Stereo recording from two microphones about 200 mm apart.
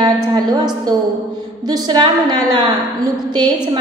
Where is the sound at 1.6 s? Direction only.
20° right (ahead or behind).